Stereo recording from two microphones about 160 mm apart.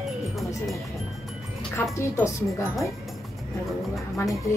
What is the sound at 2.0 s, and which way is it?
Speech, 15° left (ahead or behind).